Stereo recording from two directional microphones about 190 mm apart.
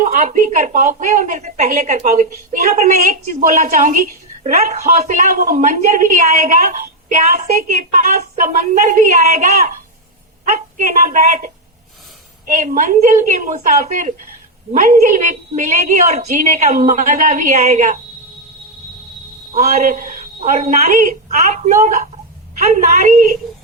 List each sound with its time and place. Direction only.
0.0 s a woman's voice: 40° right (ahead or behind)
10.8 s a woman's voice: 40° right (ahead or behind)
19.5 s a woman's voice: 40° right (ahead or behind)